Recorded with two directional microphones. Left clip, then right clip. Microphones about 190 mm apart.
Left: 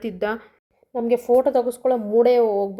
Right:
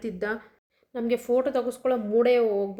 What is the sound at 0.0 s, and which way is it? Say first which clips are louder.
Speech: left 5 dB; centre (ahead or behind).